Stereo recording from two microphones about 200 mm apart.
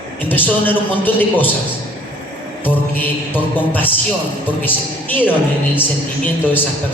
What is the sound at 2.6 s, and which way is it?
Music, 10° left (ahead or behind).